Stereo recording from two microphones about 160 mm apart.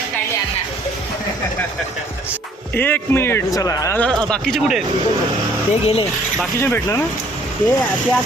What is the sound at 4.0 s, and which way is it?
Speech, 5° left (ahead or behind).